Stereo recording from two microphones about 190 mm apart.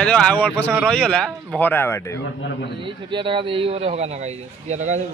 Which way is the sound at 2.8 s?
25° right (ahead or behind).